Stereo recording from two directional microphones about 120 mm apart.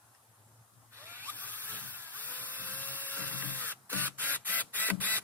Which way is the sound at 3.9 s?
15° left (ahead or behind).